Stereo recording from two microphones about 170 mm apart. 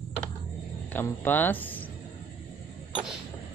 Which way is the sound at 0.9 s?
10° left (ahead or behind).